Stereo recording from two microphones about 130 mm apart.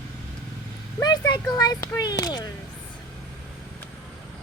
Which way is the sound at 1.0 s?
30° left (ahead or behind).